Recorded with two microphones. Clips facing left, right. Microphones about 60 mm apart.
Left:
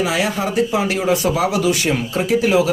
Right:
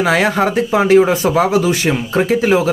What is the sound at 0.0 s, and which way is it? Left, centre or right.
Speech, right.